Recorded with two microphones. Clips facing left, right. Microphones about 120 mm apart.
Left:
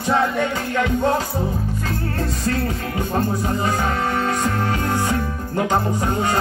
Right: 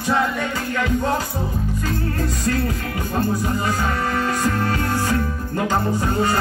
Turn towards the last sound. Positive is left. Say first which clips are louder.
# right 1 dB
turn(degrees=20)  # may be behind; listen again after turning